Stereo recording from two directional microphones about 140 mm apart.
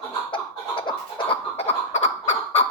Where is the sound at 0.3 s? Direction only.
35° left (ahead or behind).